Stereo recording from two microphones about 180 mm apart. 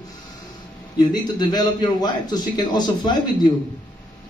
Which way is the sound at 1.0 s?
25° left (ahead or behind).